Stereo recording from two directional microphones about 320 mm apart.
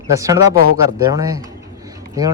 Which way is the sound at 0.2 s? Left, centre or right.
Centre.